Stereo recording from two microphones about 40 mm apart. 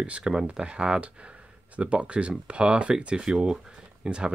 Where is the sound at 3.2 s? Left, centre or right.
Centre.